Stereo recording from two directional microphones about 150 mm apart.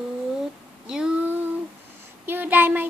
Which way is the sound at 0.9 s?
5° right (ahead or behind).